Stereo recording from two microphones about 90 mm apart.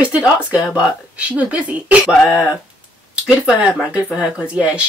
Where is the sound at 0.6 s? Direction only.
35° left (ahead or behind).